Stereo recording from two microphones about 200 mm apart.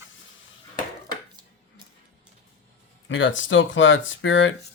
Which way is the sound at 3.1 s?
70° left (ahead or behind).